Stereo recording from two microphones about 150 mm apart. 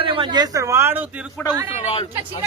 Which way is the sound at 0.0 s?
35° right (ahead or behind).